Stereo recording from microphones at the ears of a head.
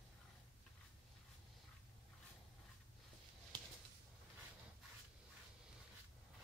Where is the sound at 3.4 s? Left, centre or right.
Right.